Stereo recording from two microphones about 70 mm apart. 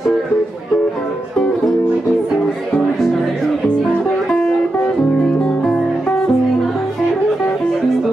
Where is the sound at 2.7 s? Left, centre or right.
Centre.